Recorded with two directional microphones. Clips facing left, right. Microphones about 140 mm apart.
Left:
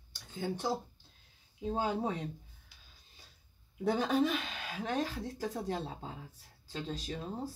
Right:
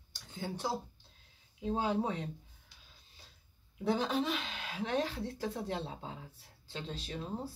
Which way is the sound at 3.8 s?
45° left (ahead or behind).